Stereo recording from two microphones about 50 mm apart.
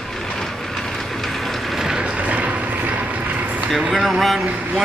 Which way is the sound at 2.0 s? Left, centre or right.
Right.